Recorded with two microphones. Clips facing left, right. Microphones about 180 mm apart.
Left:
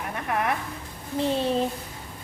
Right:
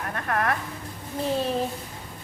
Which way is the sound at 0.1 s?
15° left (ahead or behind).